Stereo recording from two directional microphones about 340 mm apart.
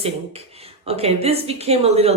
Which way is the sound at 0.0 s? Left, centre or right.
Centre.